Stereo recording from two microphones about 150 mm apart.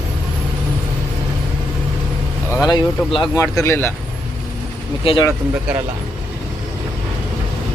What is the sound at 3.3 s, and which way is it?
Speech, 20° left (ahead or behind).